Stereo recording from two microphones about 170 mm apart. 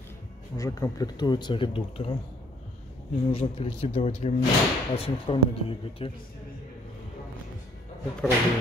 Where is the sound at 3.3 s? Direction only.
35° left (ahead or behind).